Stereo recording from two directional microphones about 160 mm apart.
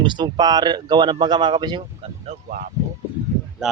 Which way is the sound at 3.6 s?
5° right (ahead or behind).